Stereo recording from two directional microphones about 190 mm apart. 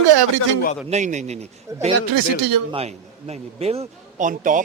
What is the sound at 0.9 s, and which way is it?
Speech, 40° right (ahead or behind).